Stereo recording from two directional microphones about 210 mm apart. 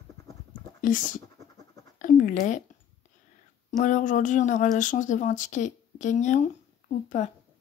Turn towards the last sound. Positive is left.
turn(degrees=35)  # may be behind; listen again after turning